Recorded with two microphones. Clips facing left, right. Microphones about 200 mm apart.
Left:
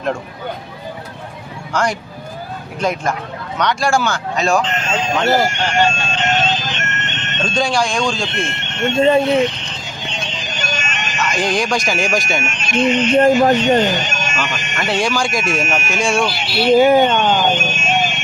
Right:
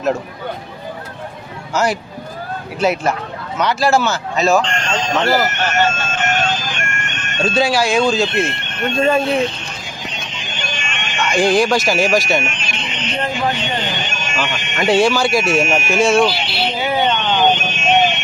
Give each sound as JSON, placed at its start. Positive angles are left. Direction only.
{"t": 1.7, "sound": "speech", "side_deg": -5}
{"t": 5.2, "sound": "vehicle", "side_deg": 25}
{"t": 7.4, "sound": "speech", "side_deg": -5}
{"t": 8.5, "sound": "speech", "side_deg": 25}
{"t": 10.1, "sound": "vehicle", "side_deg": 30}
{"t": 11.3, "sound": "speech", "side_deg": -5}
{"t": 12.4, "sound": "speech", "side_deg": 45}
{"t": 14.9, "sound": "speech", "side_deg": -5}
{"t": 16.3, "sound": "speech", "side_deg": 45}